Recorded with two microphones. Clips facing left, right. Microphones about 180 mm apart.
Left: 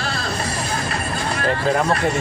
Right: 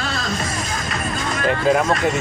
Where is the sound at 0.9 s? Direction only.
35° left (ahead or behind).